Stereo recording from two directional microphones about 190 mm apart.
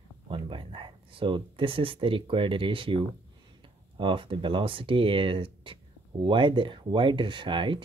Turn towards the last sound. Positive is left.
turn(degrees=-25)  # may be behind; listen again after turning